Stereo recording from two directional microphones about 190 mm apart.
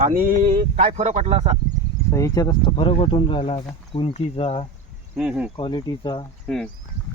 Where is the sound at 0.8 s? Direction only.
35° right (ahead or behind).